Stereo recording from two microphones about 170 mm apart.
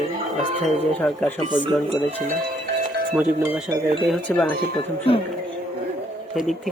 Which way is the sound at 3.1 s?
5° right (ahead or behind).